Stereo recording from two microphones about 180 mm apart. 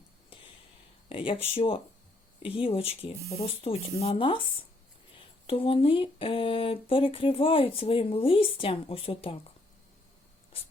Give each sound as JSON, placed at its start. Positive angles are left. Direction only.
{"t": 1.1, "sound": "speech", "side_deg": 30}
{"t": 5.5, "sound": "speech", "side_deg": 30}
{"t": 10.5, "sound": "writing", "side_deg": 30}